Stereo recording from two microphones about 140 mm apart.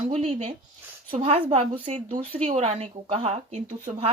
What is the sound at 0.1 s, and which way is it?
A woman's voice, 45° right (ahead or behind).